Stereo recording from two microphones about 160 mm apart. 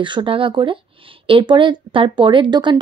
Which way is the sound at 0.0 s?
30° right (ahead or behind).